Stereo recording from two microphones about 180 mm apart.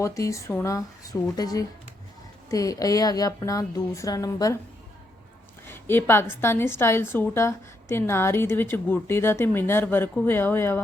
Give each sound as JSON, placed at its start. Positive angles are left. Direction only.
{"t": 0.0, "sound": "a woman's voice", "side_deg": 15}
{"t": 5.6, "sound": "a sound", "side_deg": 10}
{"t": 6.3, "sound": "a woman's voice", "side_deg": 10}